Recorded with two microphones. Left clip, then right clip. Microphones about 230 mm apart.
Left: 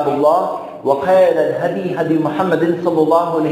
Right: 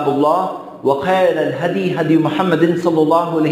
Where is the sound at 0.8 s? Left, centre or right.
Right.